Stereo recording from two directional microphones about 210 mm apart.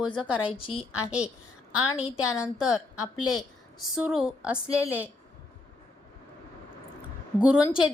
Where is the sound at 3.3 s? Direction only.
Centre (ahead or behind).